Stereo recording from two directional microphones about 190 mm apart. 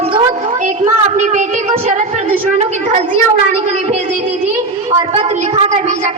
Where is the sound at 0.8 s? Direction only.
40° right (ahead or behind).